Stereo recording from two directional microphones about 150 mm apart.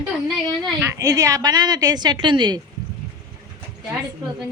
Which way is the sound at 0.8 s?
20° right (ahead or behind).